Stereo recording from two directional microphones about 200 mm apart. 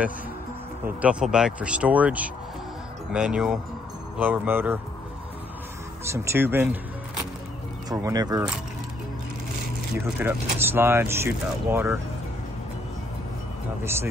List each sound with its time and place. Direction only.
0.8 s speech: 5° right (ahead or behind)
6.1 s speech: 10° right (ahead or behind)
7.9 s speech: 20° right (ahead or behind)
10.1 s speech: 10° right (ahead or behind)